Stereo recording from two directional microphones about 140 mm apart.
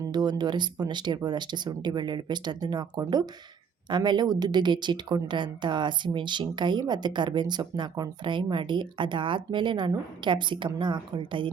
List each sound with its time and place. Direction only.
0.1 s a woman's voice: 30° right (ahead or behind)